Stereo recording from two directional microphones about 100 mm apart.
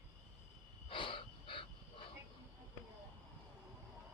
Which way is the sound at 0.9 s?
60° left (ahead or behind).